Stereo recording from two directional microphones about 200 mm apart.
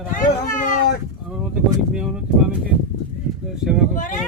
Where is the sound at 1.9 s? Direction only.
5° right (ahead or behind).